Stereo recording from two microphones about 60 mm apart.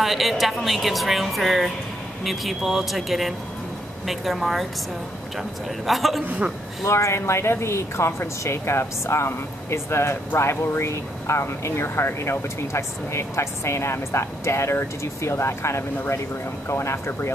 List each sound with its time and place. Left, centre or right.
0.0 s speech: centre
5.9 s speech: centre
6.2 s a man's voice: right
6.8 s speech: left